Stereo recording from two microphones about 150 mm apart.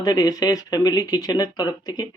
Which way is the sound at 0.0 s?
25° left (ahead or behind).